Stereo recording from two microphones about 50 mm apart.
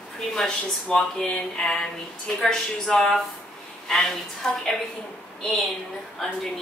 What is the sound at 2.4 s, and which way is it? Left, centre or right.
Speech, centre.